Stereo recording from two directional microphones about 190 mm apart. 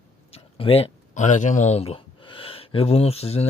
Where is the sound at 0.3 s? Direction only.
30° left (ahead or behind).